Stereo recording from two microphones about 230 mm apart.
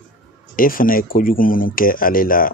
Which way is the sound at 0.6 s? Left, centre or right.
Left.